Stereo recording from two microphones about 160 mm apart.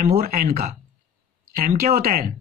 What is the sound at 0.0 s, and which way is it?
Speech, 65° right (ahead or behind).